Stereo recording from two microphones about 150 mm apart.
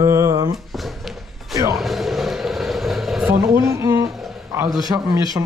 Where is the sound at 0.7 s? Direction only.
Centre (ahead or behind).